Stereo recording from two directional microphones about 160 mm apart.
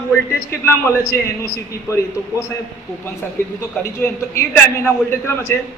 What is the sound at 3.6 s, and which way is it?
A man's voice, 15° left (ahead or behind).